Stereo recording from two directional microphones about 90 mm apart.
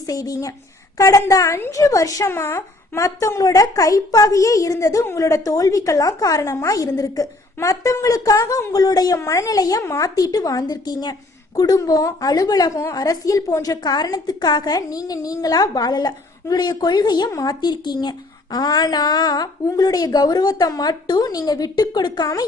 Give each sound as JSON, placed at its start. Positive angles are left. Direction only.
{"t": 0.1, "sound": "a woman's voice", "side_deg": 45}
{"t": 2.3, "sound": "a woman's voice", "side_deg": 25}
{"t": 9.1, "sound": "a woman's voice", "side_deg": 35}